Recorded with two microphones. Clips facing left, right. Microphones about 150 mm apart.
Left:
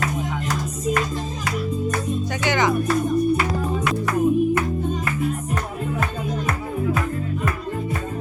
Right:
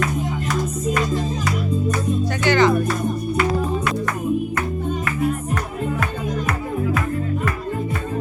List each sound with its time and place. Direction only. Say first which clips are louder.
2.4 s music: right 5 dB; 15° left (ahead or behind)